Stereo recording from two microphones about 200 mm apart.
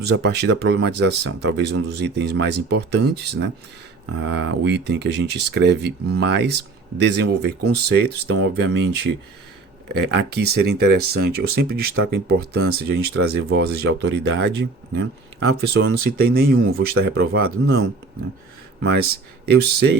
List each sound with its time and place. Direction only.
0.0 s speech: 55° right (ahead or behind)
9.9 s speech: 55° right (ahead or behind)